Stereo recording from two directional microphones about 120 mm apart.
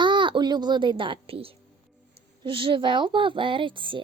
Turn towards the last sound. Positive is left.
turn(degrees=-45)  # may be behind; listen again after turning